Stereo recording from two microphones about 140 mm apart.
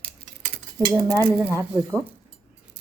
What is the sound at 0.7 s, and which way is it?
Speech, 25° right (ahead or behind).